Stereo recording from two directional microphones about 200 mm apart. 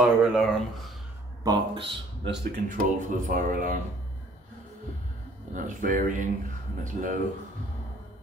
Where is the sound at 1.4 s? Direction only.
25° right (ahead or behind).